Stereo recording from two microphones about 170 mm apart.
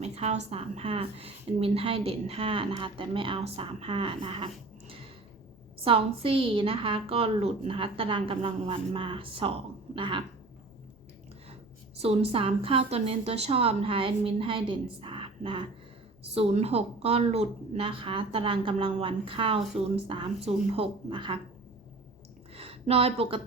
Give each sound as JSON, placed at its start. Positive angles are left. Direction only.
{"t": 0.0, "sound": "a woman's voice", "side_deg": -40}
{"t": 11.9, "sound": "a woman's voice", "side_deg": -35}
{"t": 15.0, "sound": "a sound", "side_deg": -30}
{"t": 16.3, "sound": "a woman's voice", "side_deg": -40}
{"t": 22.5, "sound": "speech", "side_deg": -35}